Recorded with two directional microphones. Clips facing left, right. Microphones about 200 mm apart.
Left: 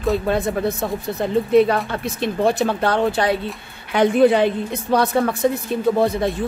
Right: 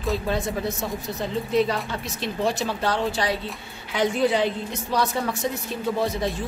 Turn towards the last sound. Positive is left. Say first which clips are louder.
# left 7 dB
turn(degrees=55)  # may be behind; listen again after turning